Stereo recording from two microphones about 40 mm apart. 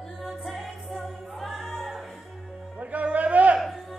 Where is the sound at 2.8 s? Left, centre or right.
Right.